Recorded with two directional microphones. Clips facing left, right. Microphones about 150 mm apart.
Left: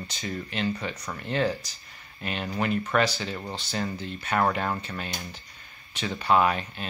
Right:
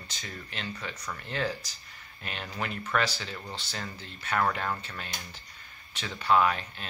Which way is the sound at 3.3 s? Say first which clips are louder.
Left 6 dB; 25° left (ahead or behind).